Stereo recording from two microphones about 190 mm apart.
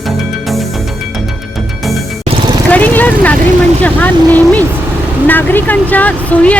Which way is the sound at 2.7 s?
10° left (ahead or behind).